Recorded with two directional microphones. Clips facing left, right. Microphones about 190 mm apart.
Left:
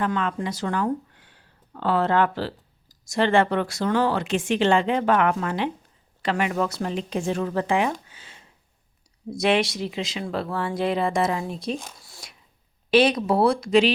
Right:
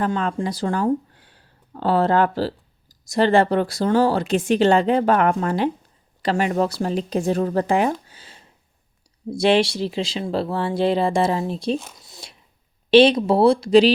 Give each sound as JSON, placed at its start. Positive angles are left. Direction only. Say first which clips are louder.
{"t": 0.0, "sound": "speech", "louder": "right 3 dB", "side_deg": -35}
{"t": 8.0, "sound": "a sound", "louder": "right 2 dB", "side_deg": -35}
{"t": 9.3, "sound": "speech", "louder": "right 4 dB", "side_deg": -30}
{"t": 12.0, "sound": "whispering", "louder": "right 3 dB", "side_deg": -20}
{"t": 12.9, "sound": "speech", "louder": "right 5 dB", "side_deg": -30}